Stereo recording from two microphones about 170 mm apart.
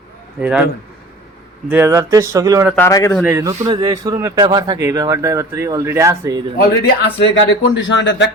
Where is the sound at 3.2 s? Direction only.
15° right (ahead or behind).